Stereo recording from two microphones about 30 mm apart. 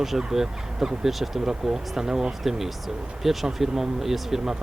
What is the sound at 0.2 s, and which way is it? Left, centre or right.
Speech, centre.